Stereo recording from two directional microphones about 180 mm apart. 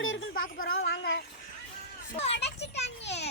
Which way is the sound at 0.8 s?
70° left (ahead or behind).